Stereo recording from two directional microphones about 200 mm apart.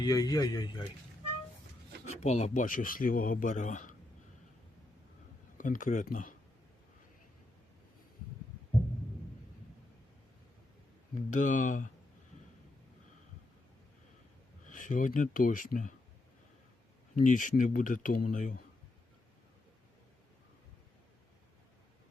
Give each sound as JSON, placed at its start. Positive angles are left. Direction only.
{"t": 0.0, "sound": "speech", "side_deg": 20}
{"t": 2.2, "sound": "speech", "side_deg": 35}
{"t": 5.5, "sound": "speech", "side_deg": 40}
{"t": 11.3, "sound": "speech", "side_deg": 40}
{"t": 14.7, "sound": "speech", "side_deg": 40}
{"t": 17.2, "sound": "speech", "side_deg": 40}